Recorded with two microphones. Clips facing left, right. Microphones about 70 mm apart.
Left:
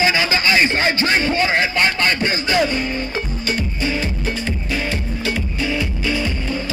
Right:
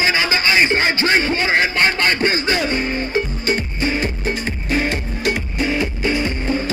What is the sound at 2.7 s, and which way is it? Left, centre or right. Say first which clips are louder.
Music: right 1 dB; right.